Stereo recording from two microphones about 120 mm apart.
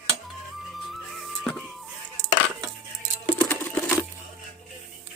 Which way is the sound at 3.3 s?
15° left (ahead or behind).